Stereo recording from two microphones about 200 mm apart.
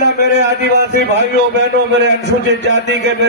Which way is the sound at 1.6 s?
60° right (ahead or behind).